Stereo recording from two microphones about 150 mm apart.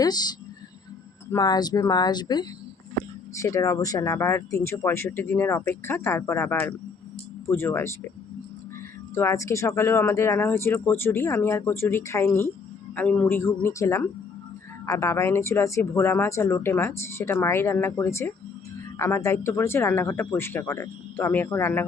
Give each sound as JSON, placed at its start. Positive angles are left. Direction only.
{"t": 0.0, "sound": "a woman's voice", "side_deg": 25}
{"t": 9.1, "sound": "speech", "side_deg": 20}